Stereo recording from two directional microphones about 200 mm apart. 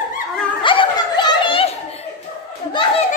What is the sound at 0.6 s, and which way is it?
Snicker, 25° left (ahead or behind).